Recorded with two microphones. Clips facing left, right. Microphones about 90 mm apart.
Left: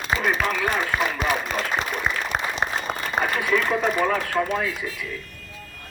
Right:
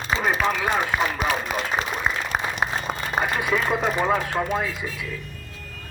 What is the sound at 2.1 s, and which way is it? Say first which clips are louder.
Applause: even; 5° right (ahead or behind).